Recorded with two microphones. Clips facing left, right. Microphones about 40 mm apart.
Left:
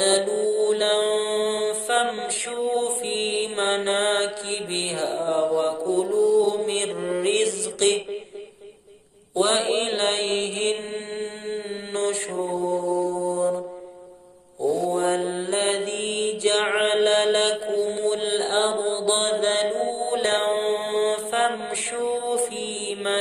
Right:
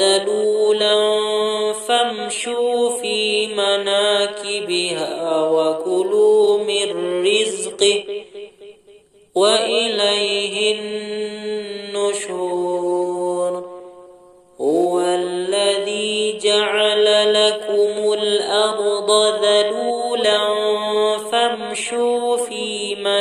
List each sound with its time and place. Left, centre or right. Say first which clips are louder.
0.0 s mantra: right 5 dB; right
9.3 s mantra: right 6 dB; right
14.6 s mantra: right 6 dB; right